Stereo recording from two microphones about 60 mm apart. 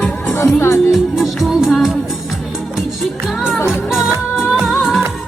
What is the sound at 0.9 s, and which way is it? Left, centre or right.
Music, centre.